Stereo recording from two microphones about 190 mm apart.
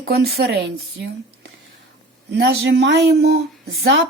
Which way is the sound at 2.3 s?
60° right (ahead or behind).